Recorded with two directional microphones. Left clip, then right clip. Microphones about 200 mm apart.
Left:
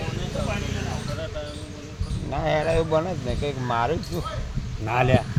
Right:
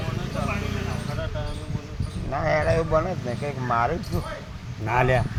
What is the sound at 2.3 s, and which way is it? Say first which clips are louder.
Speech: even; 20° left (ahead or behind).